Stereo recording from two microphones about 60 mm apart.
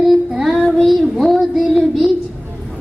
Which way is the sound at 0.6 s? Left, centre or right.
Centre.